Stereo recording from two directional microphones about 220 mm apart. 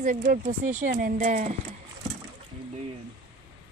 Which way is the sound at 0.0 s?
40° right (ahead or behind).